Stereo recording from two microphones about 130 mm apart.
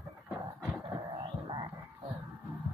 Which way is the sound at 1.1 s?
35° right (ahead or behind).